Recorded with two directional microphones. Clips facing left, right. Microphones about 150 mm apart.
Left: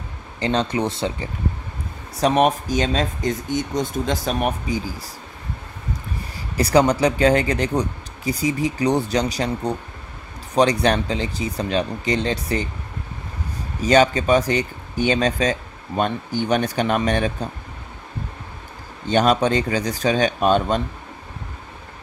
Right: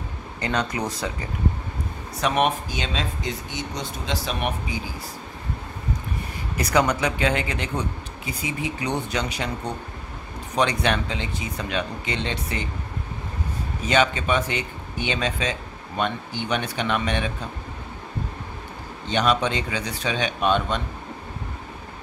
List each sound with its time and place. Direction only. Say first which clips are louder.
0.4 s speech: left 5 dB; 30° left (ahead or behind)
6.5 s speech: left 5 dB; 30° left (ahead or behind)
13.8 s speech: left 6 dB; 40° left (ahead or behind)
19.0 s speech: left 5 dB; 45° left (ahead or behind)